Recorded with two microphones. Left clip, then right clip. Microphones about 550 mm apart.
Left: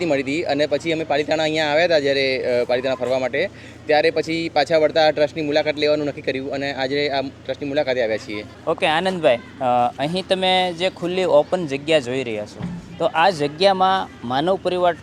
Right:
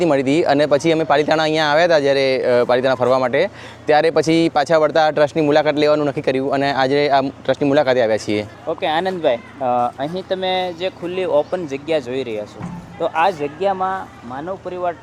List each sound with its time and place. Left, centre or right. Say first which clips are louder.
0.0 s speech: right 5 dB; right
8.8 s speech: even; left
9.6 s speech: even; centre
10.2 s speech: left 3 dB; centre
14.3 s speech: left 7 dB; left